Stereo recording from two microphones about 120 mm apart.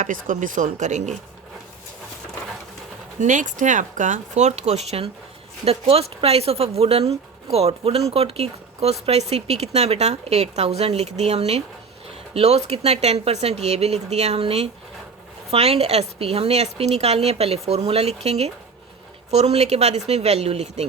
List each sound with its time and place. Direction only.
0.0 s speech: 90° right
3.2 s speech: 90° right; by 20.8 s 65° right (ahead or behind)